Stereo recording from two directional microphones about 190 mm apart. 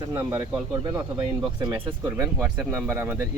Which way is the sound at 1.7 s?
10° right (ahead or behind).